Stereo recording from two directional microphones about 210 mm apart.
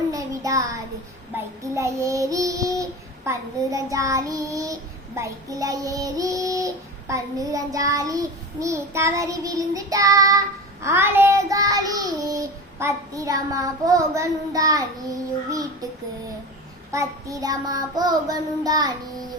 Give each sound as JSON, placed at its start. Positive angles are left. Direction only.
{"t": 0.1, "sound": "child singing", "side_deg": -15}
{"t": 16.9, "sound": "child singing", "side_deg": -15}